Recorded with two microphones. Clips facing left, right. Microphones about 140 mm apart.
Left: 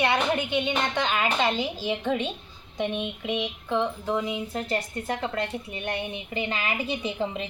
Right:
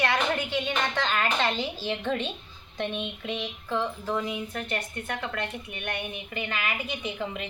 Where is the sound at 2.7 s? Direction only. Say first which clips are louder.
Left 3 dB; 15° left (ahead or behind).